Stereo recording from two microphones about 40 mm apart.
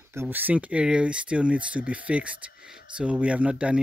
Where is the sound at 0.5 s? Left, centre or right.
Right.